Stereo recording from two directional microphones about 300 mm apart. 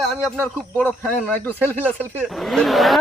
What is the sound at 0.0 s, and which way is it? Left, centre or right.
Speech, centre.